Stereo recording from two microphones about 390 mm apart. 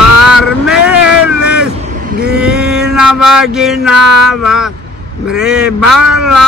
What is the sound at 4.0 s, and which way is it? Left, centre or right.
Music, right.